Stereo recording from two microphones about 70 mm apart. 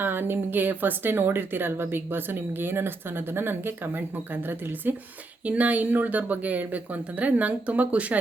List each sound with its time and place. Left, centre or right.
0.0 s speech: right